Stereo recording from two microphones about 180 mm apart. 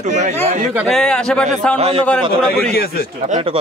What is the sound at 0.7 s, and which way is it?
Speech, centre (ahead or behind).